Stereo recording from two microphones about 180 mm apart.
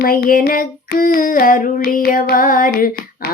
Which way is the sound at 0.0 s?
55° left (ahead or behind).